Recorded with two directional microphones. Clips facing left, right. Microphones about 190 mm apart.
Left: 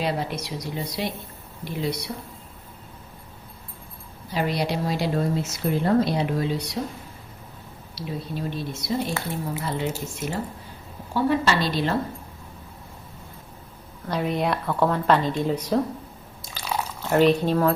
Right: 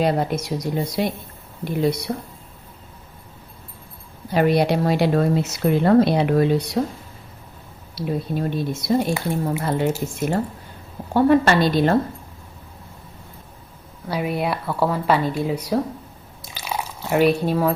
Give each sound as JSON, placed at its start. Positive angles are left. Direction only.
{"t": 0.0, "sound": "speech", "side_deg": -50}
{"t": 4.3, "sound": "speech", "side_deg": -55}
{"t": 7.9, "sound": "speech", "side_deg": -55}
{"t": 14.1, "sound": "speech", "side_deg": -5}
{"t": 16.6, "sound": "drip", "side_deg": -10}